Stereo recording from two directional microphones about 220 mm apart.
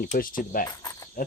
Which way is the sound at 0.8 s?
15° left (ahead or behind).